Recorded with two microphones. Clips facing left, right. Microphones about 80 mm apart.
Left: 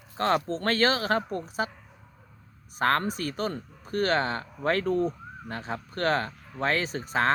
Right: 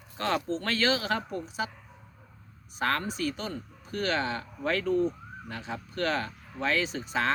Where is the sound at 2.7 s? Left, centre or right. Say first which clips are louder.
Left 4 dB; left.